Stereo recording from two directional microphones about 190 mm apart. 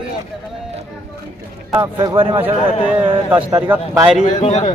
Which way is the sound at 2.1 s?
30° right (ahead or behind).